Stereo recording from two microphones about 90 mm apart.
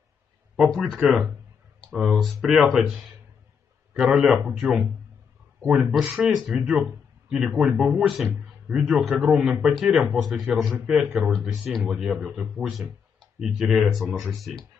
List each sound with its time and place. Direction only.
0.6 s speech: centre (ahead or behind)
6.5 s speech: 20° right (ahead or behind)
6.9 s a man's voice: 10° right (ahead or behind)